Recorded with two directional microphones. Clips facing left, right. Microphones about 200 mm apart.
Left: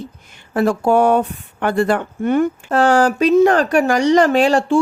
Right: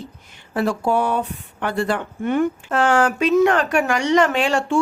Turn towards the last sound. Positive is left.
turn(degrees=35)  # may be behind; listen again after turning